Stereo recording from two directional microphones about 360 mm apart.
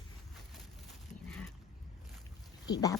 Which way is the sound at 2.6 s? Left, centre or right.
Centre.